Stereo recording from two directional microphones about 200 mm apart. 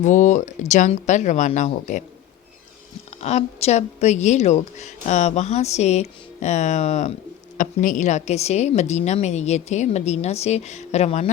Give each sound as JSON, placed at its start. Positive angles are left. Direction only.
{"t": 0.0, "sound": "a woman's voice", "side_deg": 40}
{"t": 3.2, "sound": "a woman's voice", "side_deg": 35}